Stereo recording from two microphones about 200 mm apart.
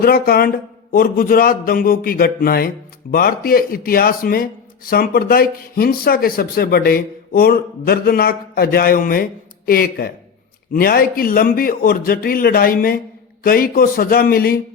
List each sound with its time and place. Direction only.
0.0 s speech: 50° left (ahead or behind)